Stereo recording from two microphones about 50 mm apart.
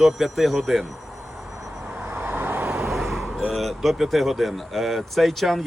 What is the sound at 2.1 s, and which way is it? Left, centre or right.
Vehicle, right.